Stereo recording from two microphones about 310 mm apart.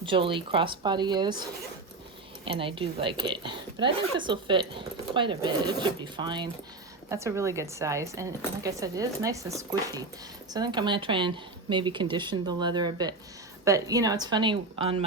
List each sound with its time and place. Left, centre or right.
0.0 s speech: centre